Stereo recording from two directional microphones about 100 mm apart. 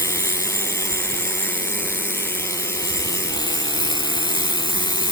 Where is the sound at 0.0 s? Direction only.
30° left (ahead or behind).